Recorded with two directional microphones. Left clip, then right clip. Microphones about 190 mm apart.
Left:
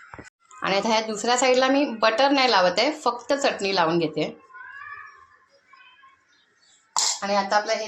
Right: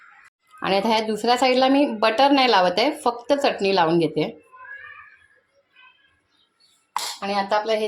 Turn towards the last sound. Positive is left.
turn(degrees=-70)  # may be behind; listen again after turning